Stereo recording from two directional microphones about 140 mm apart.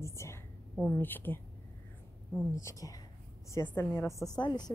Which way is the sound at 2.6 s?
20° left (ahead or behind).